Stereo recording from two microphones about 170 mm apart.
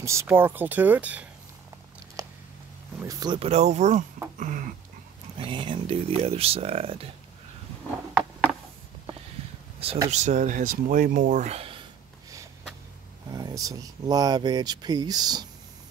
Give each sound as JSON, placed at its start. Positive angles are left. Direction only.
{"t": 0.0, "sound": "speech", "side_deg": -15}
{"t": 2.2, "sound": "a sound", "side_deg": -20}
{"t": 3.0, "sound": "speech", "side_deg": -20}
{"t": 3.3, "sound": "speech", "side_deg": -40}
{"t": 4.4, "sound": "a sound", "side_deg": -50}
{"t": 5.4, "sound": "speech", "side_deg": -30}
{"t": 9.8, "sound": "speech", "side_deg": -35}
{"t": 13.3, "sound": "speech", "side_deg": -20}